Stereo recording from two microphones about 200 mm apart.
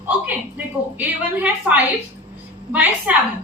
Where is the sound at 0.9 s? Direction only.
10° right (ahead or behind).